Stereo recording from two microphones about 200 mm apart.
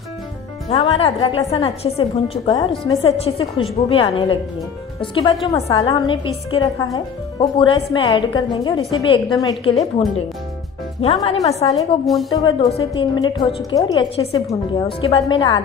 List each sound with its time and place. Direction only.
0.7 s a woman's voice: 30° left (ahead or behind)